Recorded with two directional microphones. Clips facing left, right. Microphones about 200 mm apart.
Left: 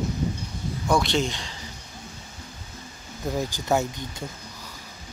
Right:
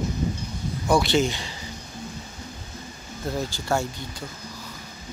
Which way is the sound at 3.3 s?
15° left (ahead or behind).